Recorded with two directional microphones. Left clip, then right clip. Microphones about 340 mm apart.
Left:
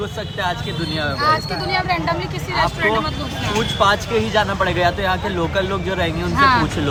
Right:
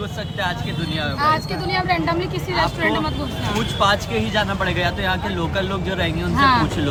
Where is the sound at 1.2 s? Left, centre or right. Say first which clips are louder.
Left 1 dB; centre.